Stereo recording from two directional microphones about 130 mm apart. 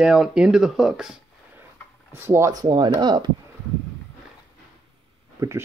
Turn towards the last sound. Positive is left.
turn(degrees=-25)  # may be behind; listen again after turning